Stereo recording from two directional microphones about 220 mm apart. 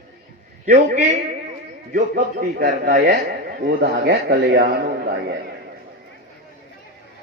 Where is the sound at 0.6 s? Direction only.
40° right (ahead or behind).